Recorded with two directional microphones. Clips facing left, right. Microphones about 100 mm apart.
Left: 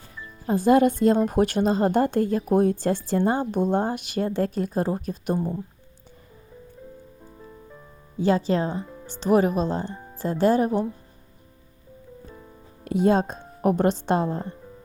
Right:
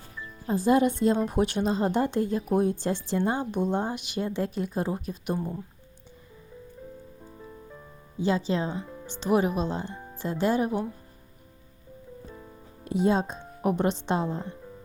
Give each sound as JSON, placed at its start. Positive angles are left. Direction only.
{"t": 0.4, "sound": "speech", "side_deg": 55}
{"t": 7.3, "sound": "music", "side_deg": 0}
{"t": 8.2, "sound": "speech", "side_deg": 50}
{"t": 8.8, "sound": "music", "side_deg": 0}
{"t": 9.2, "sound": "speech", "side_deg": 40}
{"t": 9.9, "sound": "music", "side_deg": 0}
{"t": 10.2, "sound": "speech", "side_deg": 40}
{"t": 12.8, "sound": "speech", "side_deg": 55}